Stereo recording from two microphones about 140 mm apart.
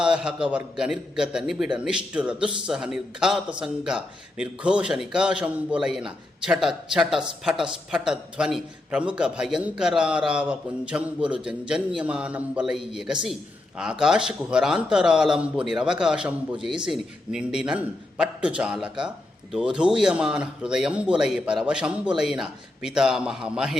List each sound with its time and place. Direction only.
0.0 s a man's voice: 5° right (ahead or behind)